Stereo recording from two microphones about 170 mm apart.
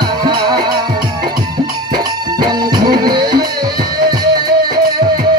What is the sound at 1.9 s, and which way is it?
Music, 25° right (ahead or behind).